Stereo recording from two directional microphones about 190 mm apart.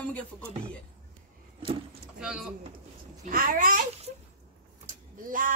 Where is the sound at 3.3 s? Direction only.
45° right (ahead or behind).